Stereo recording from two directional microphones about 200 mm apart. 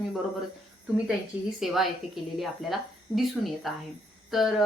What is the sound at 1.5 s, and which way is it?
Speech, centre (ahead or behind).